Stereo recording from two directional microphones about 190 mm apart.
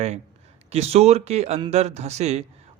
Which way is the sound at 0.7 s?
35° right (ahead or behind).